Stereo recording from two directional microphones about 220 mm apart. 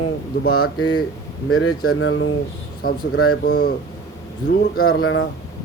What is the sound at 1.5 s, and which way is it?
Speech, 75° left (ahead or behind).